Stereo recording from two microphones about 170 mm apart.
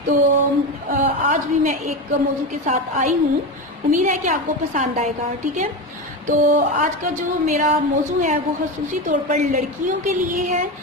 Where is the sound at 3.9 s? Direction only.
50° right (ahead or behind).